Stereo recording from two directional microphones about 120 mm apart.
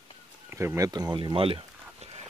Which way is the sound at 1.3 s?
50° right (ahead or behind).